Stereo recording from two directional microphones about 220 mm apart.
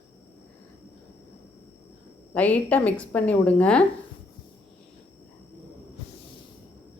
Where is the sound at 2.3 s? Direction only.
5° left (ahead or behind).